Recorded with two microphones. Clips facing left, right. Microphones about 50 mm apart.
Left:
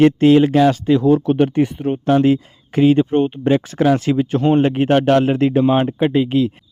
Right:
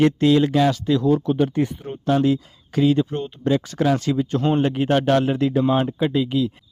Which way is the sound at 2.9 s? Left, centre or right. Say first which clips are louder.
Left 7 dB; left.